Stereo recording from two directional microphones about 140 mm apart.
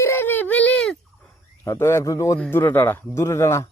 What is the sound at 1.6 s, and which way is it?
Speech, 20° left (ahead or behind).